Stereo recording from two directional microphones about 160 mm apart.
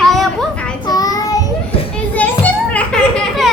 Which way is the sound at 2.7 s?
5° left (ahead or behind).